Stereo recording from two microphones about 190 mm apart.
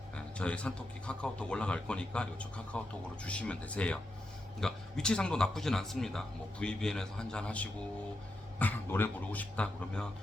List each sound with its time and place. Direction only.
0.2 s a man's voice: 5° left (ahead or behind)